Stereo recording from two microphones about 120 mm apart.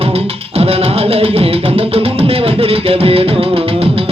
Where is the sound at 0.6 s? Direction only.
55° right (ahead or behind).